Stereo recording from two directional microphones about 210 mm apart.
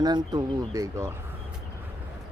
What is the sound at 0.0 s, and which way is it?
Speech, 20° right (ahead or behind).